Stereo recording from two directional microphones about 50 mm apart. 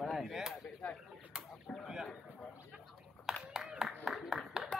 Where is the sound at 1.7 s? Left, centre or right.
Left.